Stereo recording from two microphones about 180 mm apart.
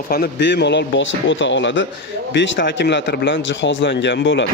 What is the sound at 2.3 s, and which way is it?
Speech, 75° left (ahead or behind).